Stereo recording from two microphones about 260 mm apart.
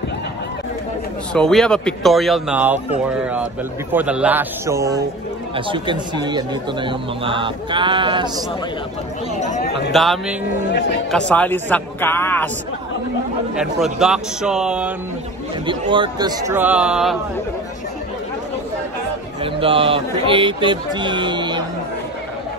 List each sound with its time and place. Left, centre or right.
1.3 s speech: centre
3.9 s a man's voice: centre
9.4 s speech: left
9.9 s a man's voice: centre
13.6 s speech: centre
15.6 s a man's voice: centre
19.4 s a man's voice: right